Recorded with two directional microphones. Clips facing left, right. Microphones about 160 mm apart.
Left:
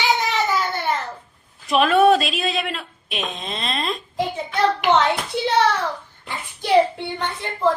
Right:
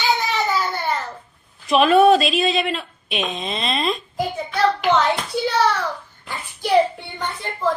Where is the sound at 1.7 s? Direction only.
Centre (ahead or behind).